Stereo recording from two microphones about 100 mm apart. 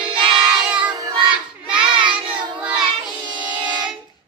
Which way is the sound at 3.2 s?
50° right (ahead or behind).